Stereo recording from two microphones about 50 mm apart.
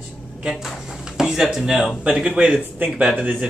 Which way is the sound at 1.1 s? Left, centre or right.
Centre.